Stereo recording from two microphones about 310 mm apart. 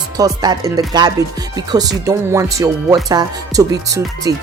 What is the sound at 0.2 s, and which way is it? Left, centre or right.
Speech, centre.